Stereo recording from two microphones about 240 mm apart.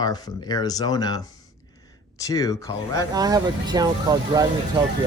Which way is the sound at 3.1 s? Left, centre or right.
Centre.